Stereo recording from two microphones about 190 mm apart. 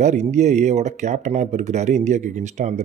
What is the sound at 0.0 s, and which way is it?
Speech, 40° right (ahead or behind).